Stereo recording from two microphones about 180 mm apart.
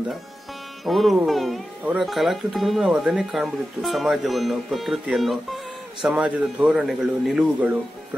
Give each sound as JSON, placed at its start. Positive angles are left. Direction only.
{"t": 0.8, "sound": "speech", "side_deg": 0}